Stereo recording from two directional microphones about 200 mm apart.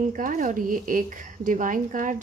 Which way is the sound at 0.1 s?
40° right (ahead or behind).